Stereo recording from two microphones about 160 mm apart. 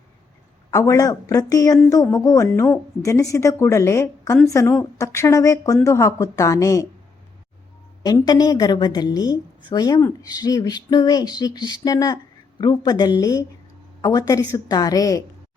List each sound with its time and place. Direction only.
0.7 s a woman's voice: 20° left (ahead or behind)
8.0 s a woman's voice: 25° left (ahead or behind)